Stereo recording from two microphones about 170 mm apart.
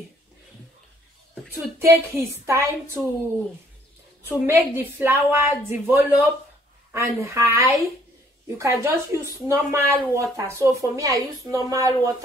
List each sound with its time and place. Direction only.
1.5 s a woman's voice: 15° right (ahead or behind)
4.3 s a woman's voice: 10° right (ahead or behind)